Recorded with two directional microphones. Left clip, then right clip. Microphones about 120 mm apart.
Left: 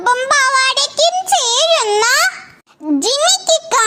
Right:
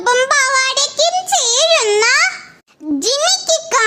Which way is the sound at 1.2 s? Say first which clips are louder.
Left 1 dB; 15° left (ahead or behind).